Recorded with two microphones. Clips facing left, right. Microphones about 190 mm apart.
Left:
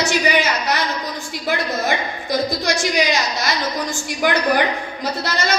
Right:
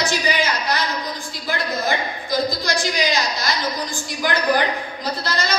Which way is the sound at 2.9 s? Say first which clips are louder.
Left 2 dB; 65° left (ahead or behind).